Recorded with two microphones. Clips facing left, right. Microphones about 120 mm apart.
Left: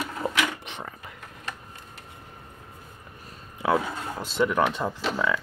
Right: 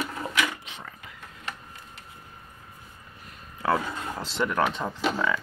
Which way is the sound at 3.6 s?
15° left (ahead or behind).